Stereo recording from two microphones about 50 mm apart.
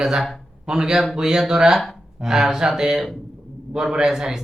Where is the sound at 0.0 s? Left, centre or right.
Centre.